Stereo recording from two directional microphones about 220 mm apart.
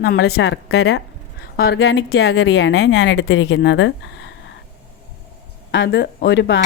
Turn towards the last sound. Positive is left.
turn(degrees=55)  # may be behind; listen again after turning